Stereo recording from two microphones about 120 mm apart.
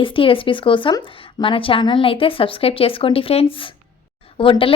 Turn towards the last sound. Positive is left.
turn(degrees=45)  # may be behind; listen again after turning